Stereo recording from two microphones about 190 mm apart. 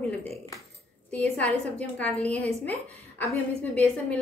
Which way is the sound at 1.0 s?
10° left (ahead or behind).